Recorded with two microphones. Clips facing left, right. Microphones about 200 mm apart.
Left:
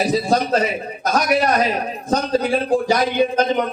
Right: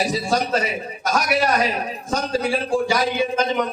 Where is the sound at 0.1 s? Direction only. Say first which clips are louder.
Left 4 dB; 35° left (ahead or behind).